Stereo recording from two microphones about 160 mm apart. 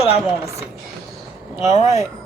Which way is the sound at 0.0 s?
40° left (ahead or behind).